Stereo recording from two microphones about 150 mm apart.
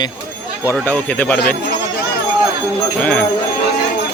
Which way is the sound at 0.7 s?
10° left (ahead or behind).